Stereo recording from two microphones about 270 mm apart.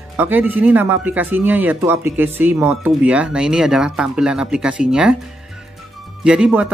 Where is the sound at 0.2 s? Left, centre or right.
Centre.